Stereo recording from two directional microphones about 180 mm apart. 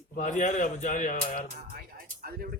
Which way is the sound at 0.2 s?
45° left (ahead or behind).